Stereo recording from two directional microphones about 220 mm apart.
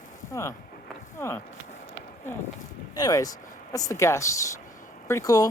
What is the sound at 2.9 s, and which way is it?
Speech, 15° left (ahead or behind).